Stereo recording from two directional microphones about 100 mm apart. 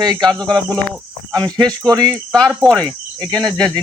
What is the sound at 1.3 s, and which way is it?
Speech, 40° right (ahead or behind).